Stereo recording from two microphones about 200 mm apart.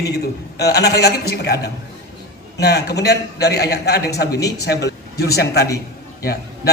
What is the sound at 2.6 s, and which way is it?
A man's voice, 55° left (ahead or behind).